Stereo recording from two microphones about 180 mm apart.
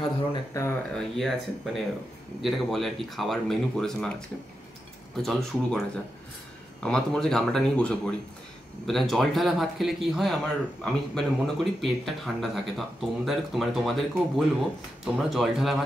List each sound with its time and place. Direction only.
0.0 s a sound: 20° left (ahead or behind)
0.9 s speech: centre (ahead or behind)
5.1 s speech: centre (ahead or behind)
6.8 s speech: 5° left (ahead or behind)